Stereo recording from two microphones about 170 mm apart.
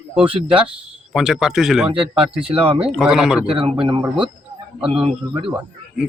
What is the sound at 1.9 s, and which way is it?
A man's voice, 30° right (ahead or behind).